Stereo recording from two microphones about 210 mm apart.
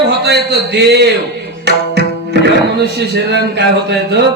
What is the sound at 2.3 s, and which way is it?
A man's voice, 55° right (ahead or behind).